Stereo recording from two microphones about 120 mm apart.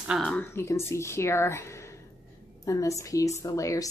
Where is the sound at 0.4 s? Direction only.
20° left (ahead or behind).